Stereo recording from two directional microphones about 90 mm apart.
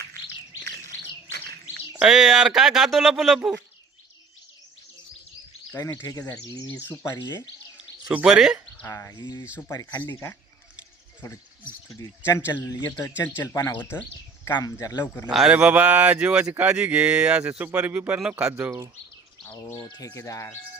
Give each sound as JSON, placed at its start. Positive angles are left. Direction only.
{"t": 2.0, "sound": "speech", "side_deg": -5}
{"t": 6.0, "sound": "speech", "side_deg": 45}
{"t": 6.7, "sound": "speech", "side_deg": 20}
{"t": 7.2, "sound": "speech", "side_deg": 55}
{"t": 8.1, "sound": "speech", "side_deg": -5}
{"t": 8.9, "sound": "speech", "side_deg": 35}
{"t": 9.1, "sound": "speech", "side_deg": 55}
{"t": 9.6, "sound": "speech", "side_deg": 40}
{"t": 11.9, "sound": "speech", "side_deg": 35}
{"t": 14.5, "sound": "speech", "side_deg": 45}
{"t": 15.3, "sound": "speech", "side_deg": -5}
{"t": 15.5, "sound": "speech", "side_deg": -15}
{"t": 19.5, "sound": "speech", "side_deg": 35}